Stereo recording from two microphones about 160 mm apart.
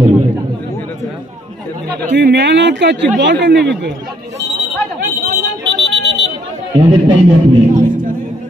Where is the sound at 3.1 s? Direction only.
90° right.